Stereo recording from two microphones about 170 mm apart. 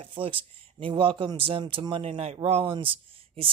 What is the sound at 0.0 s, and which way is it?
Speech, 30° right (ahead or behind).